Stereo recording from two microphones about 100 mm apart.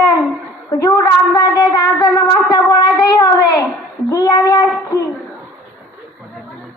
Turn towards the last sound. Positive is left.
turn(degrees=35)  # may be behind; listen again after turning